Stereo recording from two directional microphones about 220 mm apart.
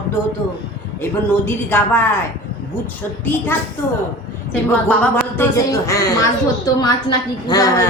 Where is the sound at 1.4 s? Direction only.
10° left (ahead or behind).